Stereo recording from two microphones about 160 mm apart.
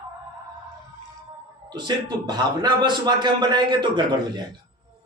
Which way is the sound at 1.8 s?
25° right (ahead or behind).